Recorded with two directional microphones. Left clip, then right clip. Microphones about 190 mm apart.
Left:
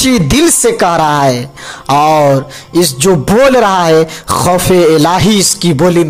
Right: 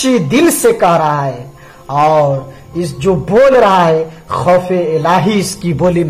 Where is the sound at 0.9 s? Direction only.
50° left (ahead or behind).